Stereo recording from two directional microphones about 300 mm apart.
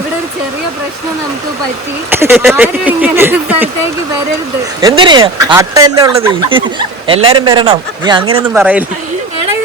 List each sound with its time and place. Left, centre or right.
2.0 s speech: centre
4.8 s speech: centre